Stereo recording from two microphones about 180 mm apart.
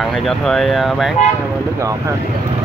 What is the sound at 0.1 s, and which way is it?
Speech, centre (ahead or behind).